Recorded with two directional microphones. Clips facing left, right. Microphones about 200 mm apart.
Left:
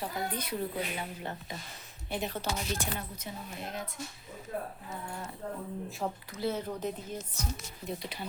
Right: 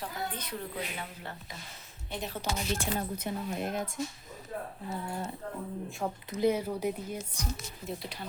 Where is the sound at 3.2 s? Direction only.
55° right (ahead or behind).